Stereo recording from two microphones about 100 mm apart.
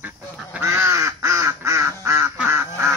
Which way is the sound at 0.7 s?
30° right (ahead or behind).